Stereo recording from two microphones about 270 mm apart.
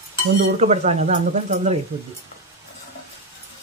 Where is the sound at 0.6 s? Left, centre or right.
Right.